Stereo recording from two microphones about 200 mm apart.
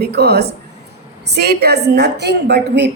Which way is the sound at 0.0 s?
55° right (ahead or behind).